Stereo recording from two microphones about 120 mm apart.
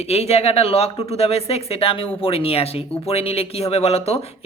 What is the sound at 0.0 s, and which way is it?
Speech, 60° left (ahead or behind).